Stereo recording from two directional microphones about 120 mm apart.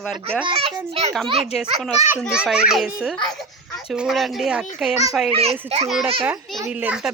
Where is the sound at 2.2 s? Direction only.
5° right (ahead or behind).